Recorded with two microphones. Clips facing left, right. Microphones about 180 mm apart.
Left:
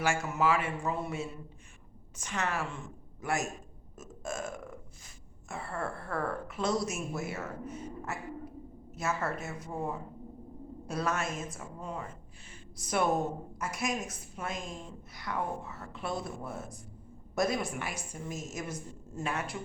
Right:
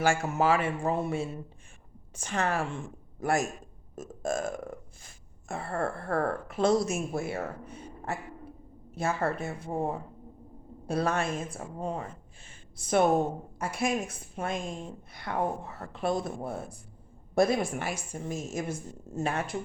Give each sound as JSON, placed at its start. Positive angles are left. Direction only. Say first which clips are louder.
{"t": 0.0, "sound": "a woman's voice", "louder": "right 4 dB", "side_deg": -30}
{"t": 3.9, "sound": "burping", "louder": "right 7 dB", "side_deg": -35}
{"t": 5.0, "sound": "speech", "louder": "right 6 dB", "side_deg": -50}
{"t": 6.5, "sound": "a woman's voice", "louder": "right 8 dB", "side_deg": -30}
{"t": 14.4, "sound": "a woman's voice", "louder": "right 5 dB", "side_deg": -55}
{"t": 15.6, "sound": "speech", "louder": "right 3 dB", "side_deg": -35}
{"t": 16.0, "sound": "speech", "louder": "right 7 dB", "side_deg": -50}
{"t": 16.4, "sound": "a woman's voice", "louder": "right 5 dB", "side_deg": -30}
{"t": 19.3, "sound": "speech", "louder": "right 1 dB", "side_deg": -50}